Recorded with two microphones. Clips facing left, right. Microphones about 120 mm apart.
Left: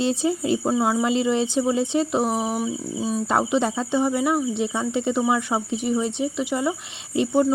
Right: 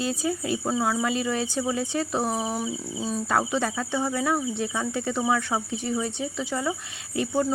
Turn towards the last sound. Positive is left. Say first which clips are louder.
# left 5 dB
turn(degrees=20)  # may be behind; listen again after turning